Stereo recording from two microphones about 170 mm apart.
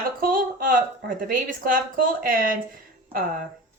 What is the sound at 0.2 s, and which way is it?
Speech, 55° right (ahead or behind).